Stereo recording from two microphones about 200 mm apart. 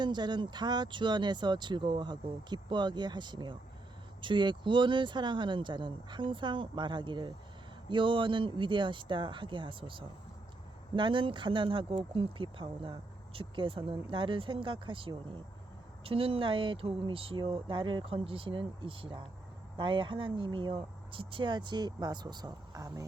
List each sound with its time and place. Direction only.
0.0 s speech: 20° right (ahead or behind)